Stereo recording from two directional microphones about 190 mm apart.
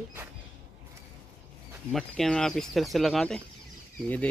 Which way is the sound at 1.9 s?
Centre (ahead or behind).